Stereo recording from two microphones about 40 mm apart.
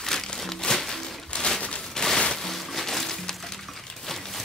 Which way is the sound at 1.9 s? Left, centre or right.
Centre.